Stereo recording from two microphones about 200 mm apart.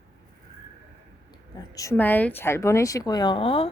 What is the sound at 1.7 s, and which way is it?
A woman's voice, 15° left (ahead or behind).